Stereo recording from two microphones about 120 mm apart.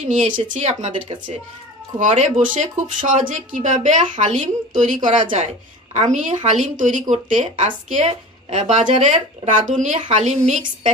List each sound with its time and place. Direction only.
0.4 s speech: 70° right (ahead or behind)
2.0 s a woman's voice: 85° right
10.0 s speech: 75° right (ahead or behind)